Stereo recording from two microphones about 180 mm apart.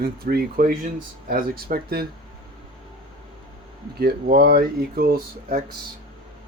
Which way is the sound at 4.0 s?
60° right (ahead or behind).